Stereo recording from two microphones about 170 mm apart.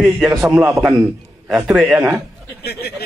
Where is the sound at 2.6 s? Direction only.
70° left (ahead or behind).